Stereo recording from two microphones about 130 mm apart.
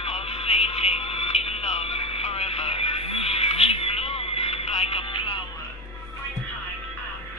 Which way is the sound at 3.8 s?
50° left (ahead or behind).